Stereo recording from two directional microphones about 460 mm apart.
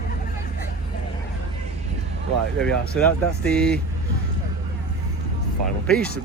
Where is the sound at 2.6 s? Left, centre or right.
Centre.